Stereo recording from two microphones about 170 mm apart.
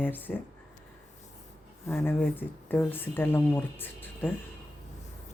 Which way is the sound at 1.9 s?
15° left (ahead or behind).